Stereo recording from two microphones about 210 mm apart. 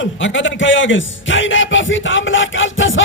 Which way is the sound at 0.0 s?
65° left (ahead or behind).